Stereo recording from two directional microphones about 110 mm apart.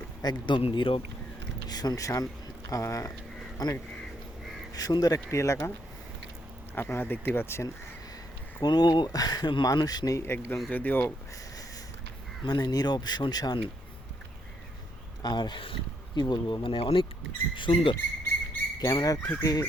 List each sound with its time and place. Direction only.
0.2 s speech: 40° left (ahead or behind)
1.6 s speech: 35° left (ahead or behind)
6.7 s speech: 20° left (ahead or behind)
8.6 s speech: 40° left (ahead or behind); by 11.1 s 15° left (ahead or behind)
12.5 s speech: 40° left (ahead or behind)
15.2 s speech: 40° left (ahead or behind)
18.8 s speech: 30° left (ahead or behind)